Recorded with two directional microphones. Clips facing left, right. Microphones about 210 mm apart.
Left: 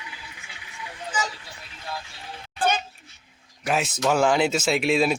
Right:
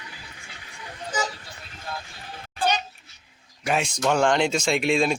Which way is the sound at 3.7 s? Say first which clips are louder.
Even; 5° left (ahead or behind).